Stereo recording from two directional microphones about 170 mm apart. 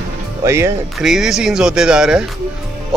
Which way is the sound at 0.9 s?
Centre (ahead or behind).